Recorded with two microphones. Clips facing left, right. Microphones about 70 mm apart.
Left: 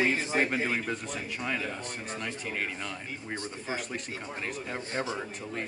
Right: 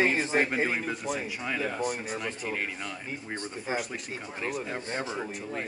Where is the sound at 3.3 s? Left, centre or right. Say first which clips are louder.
Right 1 dB; right.